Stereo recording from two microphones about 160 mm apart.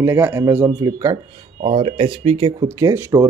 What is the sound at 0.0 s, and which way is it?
Speech, 15° right (ahead or behind).